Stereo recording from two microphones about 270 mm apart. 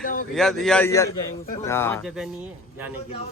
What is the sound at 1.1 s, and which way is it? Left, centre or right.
Speech, left.